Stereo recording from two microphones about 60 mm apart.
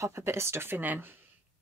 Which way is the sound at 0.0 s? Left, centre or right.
Right.